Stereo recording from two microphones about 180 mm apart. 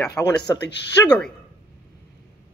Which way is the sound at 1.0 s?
5° left (ahead or behind).